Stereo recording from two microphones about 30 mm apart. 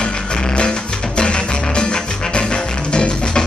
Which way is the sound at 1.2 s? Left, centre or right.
Left.